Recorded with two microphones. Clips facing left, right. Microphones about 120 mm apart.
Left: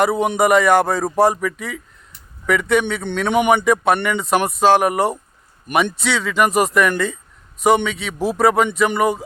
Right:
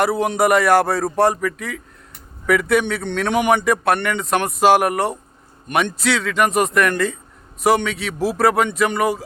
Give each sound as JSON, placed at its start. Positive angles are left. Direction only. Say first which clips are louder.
{"t": 0.0, "sound": "speech", "louder": "left 1 dB", "side_deg": 0}
{"t": 4.6, "sound": "speech", "louder": "even", "side_deg": -10}
{"t": 4.9, "sound": "speech", "louder": "left 2 dB", "side_deg": 0}